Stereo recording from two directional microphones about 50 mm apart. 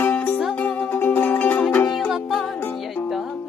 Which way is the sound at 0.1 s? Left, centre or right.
Left.